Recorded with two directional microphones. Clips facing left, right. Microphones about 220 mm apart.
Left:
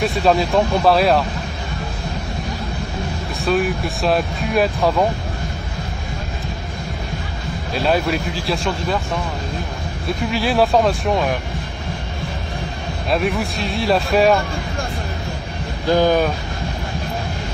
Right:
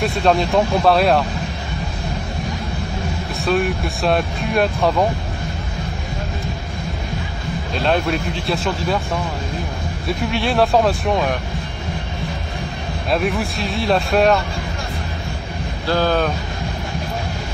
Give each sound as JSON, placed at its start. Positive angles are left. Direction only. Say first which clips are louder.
{"t": 0.0, "sound": "speech", "louder": "even", "side_deg": 0}
{"t": 3.3, "sound": "speech", "louder": "even", "side_deg": 0}
{"t": 7.7, "sound": "speech", "louder": "left 1 dB", "side_deg": 5}
{"t": 10.2, "sound": "speech", "louder": "left 1 dB", "side_deg": 0}
{"t": 13.1, "sound": "speech", "louder": "even", "side_deg": 0}
{"t": 15.9, "sound": "speech", "louder": "left 3 dB", "side_deg": 15}